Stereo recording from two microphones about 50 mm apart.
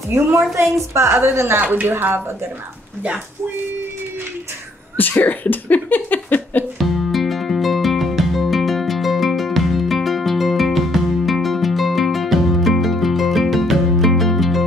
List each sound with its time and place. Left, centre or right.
0.9 s a woman's voice: right
1.6 s speech: right
4.9 s speech: left
6.8 s music: centre